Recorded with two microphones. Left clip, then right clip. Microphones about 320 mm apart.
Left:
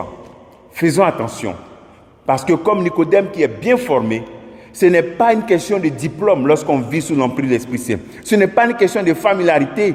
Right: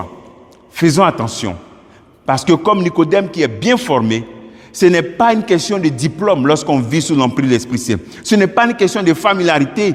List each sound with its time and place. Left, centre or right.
0.8 s a man's voice: right
4.8 s a man's voice: right